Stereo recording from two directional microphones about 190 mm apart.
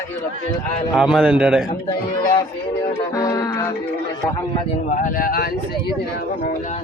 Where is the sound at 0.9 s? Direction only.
5° right (ahead or behind).